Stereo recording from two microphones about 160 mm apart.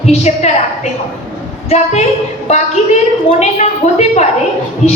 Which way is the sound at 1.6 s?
45° left (ahead or behind).